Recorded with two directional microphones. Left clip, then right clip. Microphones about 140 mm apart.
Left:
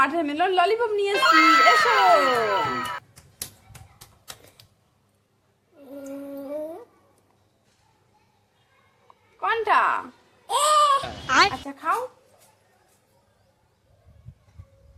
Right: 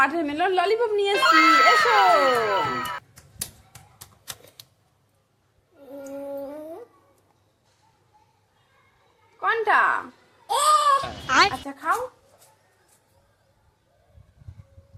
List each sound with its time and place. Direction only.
0.0 s speech: centre (ahead or behind)
9.4 s speech: centre (ahead or behind)
10.4 s a sound: 25° left (ahead or behind)
11.0 s speech: centre (ahead or behind)